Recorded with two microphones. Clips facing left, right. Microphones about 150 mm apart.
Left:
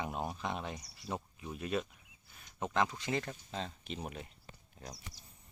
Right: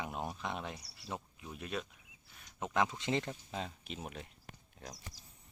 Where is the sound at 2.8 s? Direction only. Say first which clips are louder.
Right 1 dB; 20° right (ahead or behind); by 4.9 s 5° left (ahead or behind).